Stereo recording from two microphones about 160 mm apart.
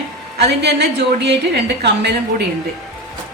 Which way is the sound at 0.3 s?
90° right.